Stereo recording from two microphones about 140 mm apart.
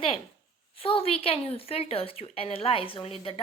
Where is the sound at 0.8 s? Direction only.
40° left (ahead or behind).